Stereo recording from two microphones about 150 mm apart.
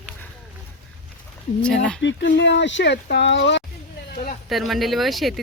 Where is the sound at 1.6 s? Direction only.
5° left (ahead or behind).